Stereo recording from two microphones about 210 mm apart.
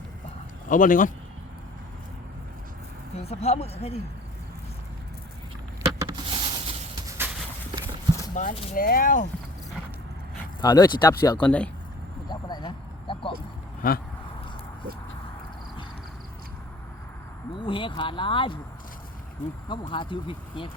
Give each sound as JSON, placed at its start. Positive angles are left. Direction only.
{"t": 0.7, "sound": "speech", "side_deg": 40}
{"t": 3.2, "sound": "speech", "side_deg": 30}
{"t": 5.8, "sound": "a sound", "side_deg": -20}
{"t": 8.4, "sound": "speech", "side_deg": 40}
{"t": 10.6, "sound": "speech", "side_deg": 20}
{"t": 11.4, "sound": "speech", "side_deg": 5}
{"t": 12.3, "sound": "a sound", "side_deg": 20}
{"t": 13.8, "sound": "speech", "side_deg": 40}
{"t": 17.6, "sound": "speech", "side_deg": 25}
{"t": 19.4, "sound": "speech", "side_deg": 35}
{"t": 19.9, "sound": "speech", "side_deg": 25}